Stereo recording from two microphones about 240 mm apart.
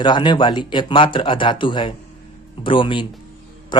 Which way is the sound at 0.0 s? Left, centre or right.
Centre.